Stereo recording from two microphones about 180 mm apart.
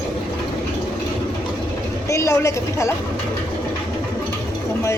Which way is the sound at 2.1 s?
15° left (ahead or behind).